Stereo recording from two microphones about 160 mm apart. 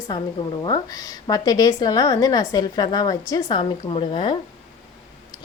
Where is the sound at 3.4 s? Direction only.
35° left (ahead or behind).